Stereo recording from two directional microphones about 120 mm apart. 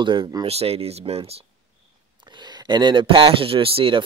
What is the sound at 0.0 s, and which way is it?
Speech, 40° right (ahead or behind).